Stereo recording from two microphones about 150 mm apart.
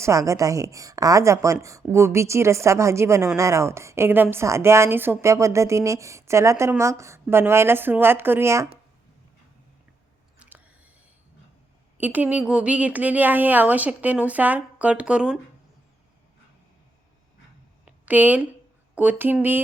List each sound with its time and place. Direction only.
0.0 s a woman's voice: 20° right (ahead or behind)
10.3 s chewing: 10° right (ahead or behind)
11.9 s a woman's voice: 10° right (ahead or behind)
17.8 s a sound: 10° right (ahead or behind)
18.9 s a woman's voice: 10° right (ahead or behind)